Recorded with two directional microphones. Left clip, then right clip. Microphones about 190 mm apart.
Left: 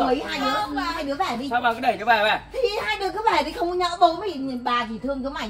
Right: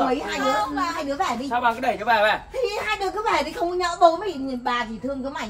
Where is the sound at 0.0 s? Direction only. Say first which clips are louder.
Even; centre (ahead or behind).